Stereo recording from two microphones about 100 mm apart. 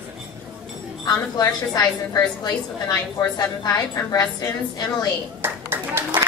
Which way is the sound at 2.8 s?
35° left (ahead or behind).